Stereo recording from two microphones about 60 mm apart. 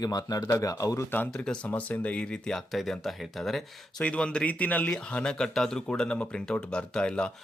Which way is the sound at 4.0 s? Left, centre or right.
Centre.